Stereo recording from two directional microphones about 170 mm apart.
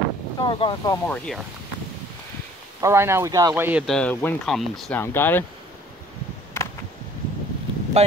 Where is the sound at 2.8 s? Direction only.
15° right (ahead or behind).